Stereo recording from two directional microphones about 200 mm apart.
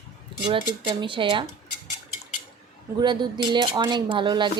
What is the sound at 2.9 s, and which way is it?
Speech, 20° right (ahead or behind).